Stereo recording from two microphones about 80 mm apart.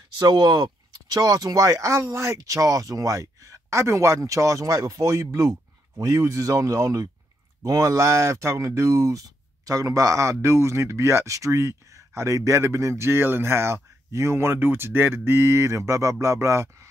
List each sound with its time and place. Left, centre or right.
0.2 s speech: right